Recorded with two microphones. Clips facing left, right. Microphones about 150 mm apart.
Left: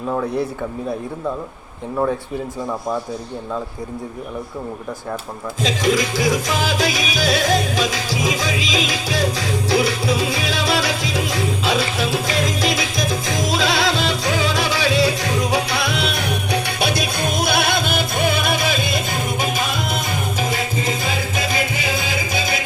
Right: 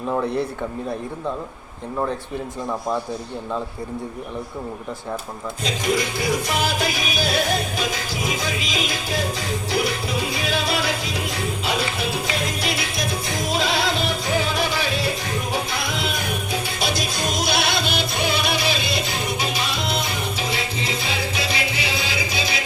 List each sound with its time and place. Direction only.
0.1 s speech: 5° right (ahead or behind)
5.6 s music: 90° left; by 22.6 s 50° left (ahead or behind)